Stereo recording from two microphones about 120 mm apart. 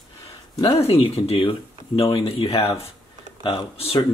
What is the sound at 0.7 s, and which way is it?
Speech, 55° left (ahead or behind).